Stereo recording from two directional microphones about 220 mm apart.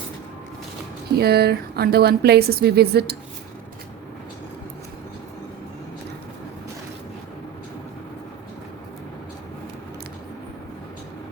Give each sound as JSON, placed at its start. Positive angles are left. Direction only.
{"t": 1.1, "sound": "speech", "side_deg": -45}